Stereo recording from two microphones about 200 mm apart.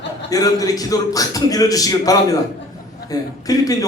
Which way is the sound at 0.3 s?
20° left (ahead or behind).